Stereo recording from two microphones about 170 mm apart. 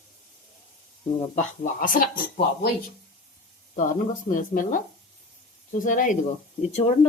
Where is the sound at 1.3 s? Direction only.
50° left (ahead or behind).